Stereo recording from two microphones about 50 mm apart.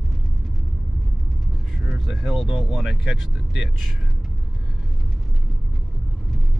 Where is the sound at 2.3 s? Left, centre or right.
Centre.